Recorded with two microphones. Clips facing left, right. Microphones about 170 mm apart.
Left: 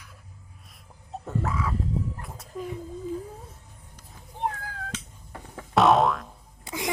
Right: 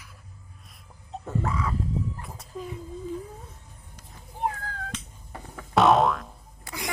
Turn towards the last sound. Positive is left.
turn(degrees=15)  # may be behind; listen again after turning